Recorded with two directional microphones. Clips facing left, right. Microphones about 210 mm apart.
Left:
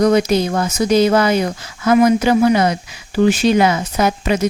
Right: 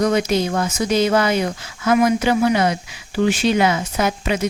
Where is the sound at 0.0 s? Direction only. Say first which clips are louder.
Left 4 dB; 40° left (ahead or behind).